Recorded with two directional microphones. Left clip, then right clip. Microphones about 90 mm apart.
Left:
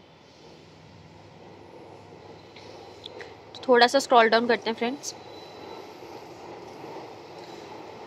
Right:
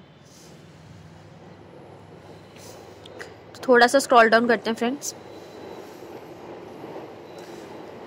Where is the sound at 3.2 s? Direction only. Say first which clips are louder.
Right 2 dB; 20° right (ahead or behind).